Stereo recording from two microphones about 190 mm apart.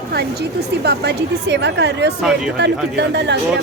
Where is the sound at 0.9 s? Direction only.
65° right (ahead or behind).